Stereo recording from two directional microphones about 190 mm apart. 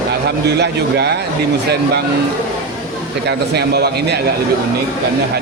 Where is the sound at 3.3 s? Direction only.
60° right (ahead or behind).